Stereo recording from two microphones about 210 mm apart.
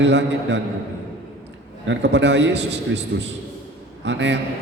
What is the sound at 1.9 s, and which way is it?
Speech, 55° right (ahead or behind).